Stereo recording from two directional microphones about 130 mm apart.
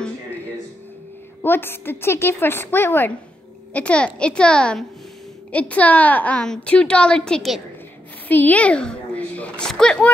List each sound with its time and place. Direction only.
1.4 s a woman's voice: 15° left (ahead or behind)
8.3 s a woman's voice: 15° left (ahead or behind)